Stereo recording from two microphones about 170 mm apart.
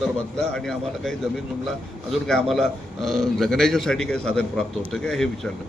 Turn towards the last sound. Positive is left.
turn(degrees=5)  # may be behind; listen again after turning